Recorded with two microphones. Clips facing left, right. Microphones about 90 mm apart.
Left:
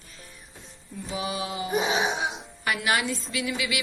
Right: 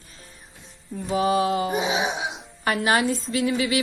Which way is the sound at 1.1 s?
45° right (ahead or behind).